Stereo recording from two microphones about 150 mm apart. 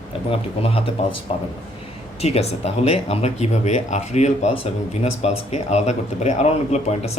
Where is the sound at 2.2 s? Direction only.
45° left (ahead or behind).